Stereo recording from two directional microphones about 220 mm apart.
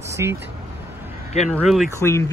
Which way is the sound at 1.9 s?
10° left (ahead or behind).